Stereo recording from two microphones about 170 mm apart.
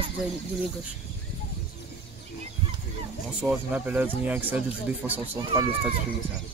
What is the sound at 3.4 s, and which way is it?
Speech, 10° right (ahead or behind).